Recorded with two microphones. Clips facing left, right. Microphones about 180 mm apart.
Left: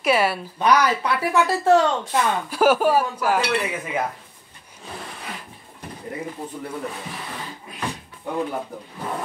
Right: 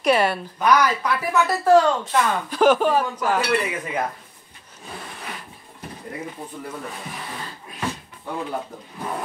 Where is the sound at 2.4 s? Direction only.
10° left (ahead or behind).